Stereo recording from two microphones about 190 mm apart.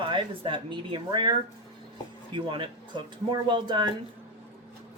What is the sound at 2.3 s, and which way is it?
Speech, 25° right (ahead or behind).